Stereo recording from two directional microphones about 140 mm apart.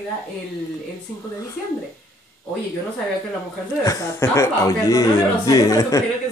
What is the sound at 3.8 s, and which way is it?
Speech, 20° left (ahead or behind).